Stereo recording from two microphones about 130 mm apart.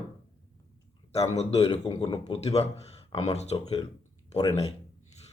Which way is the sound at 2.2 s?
55° left (ahead or behind).